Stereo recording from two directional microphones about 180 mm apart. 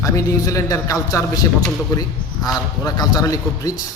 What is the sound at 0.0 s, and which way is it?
A man's voice, 20° left (ahead or behind).